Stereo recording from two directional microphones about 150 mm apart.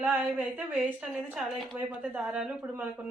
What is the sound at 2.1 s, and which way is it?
Speech, 10° right (ahead or behind).